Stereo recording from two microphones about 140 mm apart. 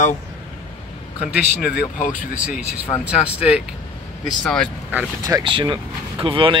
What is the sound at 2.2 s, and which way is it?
Speech, 10° right (ahead or behind).